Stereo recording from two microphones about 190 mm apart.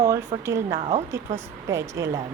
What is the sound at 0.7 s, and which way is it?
Speech, 30° right (ahead or behind).